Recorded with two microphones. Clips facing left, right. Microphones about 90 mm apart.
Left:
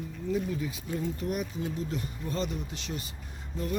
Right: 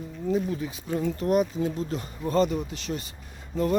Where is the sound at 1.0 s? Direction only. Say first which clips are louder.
Right 10 dB; 90° right.